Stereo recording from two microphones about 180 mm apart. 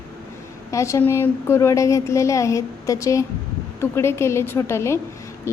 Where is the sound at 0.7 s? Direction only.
15° left (ahead or behind).